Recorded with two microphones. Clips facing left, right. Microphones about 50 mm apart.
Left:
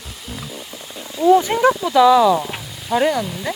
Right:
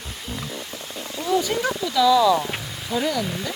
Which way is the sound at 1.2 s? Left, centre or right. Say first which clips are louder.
Left 9 dB; left.